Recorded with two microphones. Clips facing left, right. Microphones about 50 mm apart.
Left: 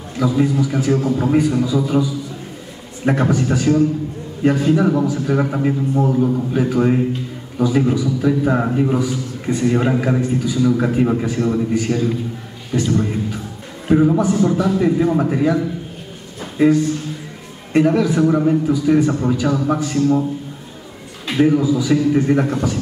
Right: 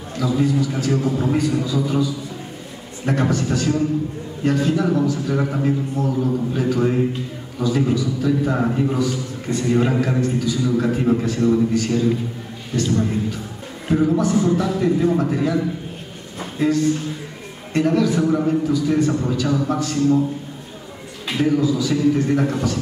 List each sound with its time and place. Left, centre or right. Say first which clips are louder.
0.4 s a man's voice: left 2 dB; centre
3.1 s a man's voice: left 3 dB; centre
21.4 s a man's voice: left 4 dB; centre